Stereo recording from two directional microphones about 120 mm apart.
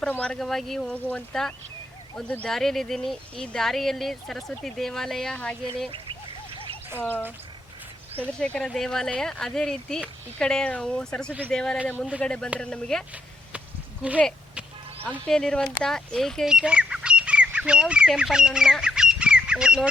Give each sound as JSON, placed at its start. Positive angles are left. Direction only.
{"t": 0.0, "sound": "speech", "side_deg": 10}
{"t": 5.9, "sound": "duck", "side_deg": -50}
{"t": 7.0, "sound": "speech", "side_deg": 15}
{"t": 8.4, "sound": "speech", "side_deg": 10}
{"t": 15.3, "sound": "speech", "side_deg": 5}